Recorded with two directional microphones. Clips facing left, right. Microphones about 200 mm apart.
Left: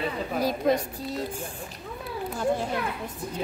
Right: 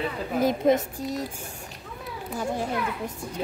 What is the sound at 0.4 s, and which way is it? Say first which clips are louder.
Speech: right 3 dB; 20° right (ahead or behind).